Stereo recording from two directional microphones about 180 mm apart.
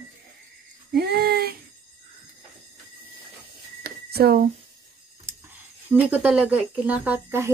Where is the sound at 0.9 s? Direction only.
65° right (ahead or behind).